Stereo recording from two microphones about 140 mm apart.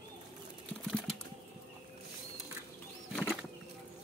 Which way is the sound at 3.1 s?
Centre (ahead or behind).